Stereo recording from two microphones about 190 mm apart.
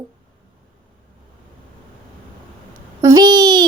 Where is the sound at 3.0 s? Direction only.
20° right (ahead or behind).